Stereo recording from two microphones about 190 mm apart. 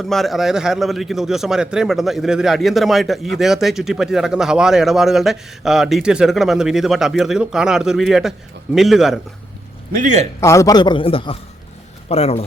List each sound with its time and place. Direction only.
0.0 s a man's voice: centre (ahead or behind)
9.9 s a man's voice: 45° right (ahead or behind)
10.4 s a man's voice: 15° left (ahead or behind); by 12.5 s 35° left (ahead or behind)